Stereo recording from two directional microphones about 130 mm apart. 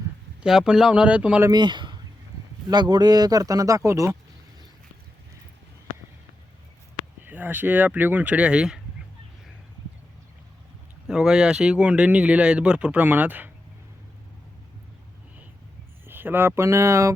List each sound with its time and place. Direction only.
0.4 s speech: 5° right (ahead or behind)
1.5 s speech: 35° right (ahead or behind)
7.3 s speech: 15° right (ahead or behind)
11.1 s speech: 5° right (ahead or behind)
16.0 s speech: 15° right (ahead or behind)